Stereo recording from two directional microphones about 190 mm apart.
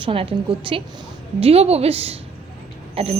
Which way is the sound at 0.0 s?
30° right (ahead or behind).